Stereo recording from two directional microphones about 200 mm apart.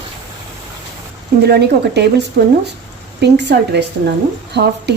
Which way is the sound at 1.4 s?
55° right (ahead or behind).